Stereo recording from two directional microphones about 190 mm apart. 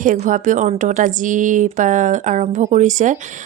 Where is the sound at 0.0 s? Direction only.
45° right (ahead or behind).